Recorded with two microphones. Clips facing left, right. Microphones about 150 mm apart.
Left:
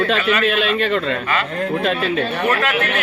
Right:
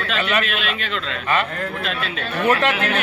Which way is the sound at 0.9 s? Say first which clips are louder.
Left 3 dB; 55° left (ahead or behind).